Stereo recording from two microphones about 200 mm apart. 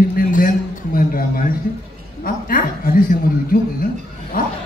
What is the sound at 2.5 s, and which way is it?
Speech, 45° left (ahead or behind).